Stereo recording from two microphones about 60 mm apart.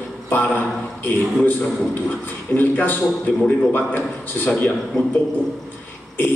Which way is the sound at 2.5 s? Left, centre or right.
Left.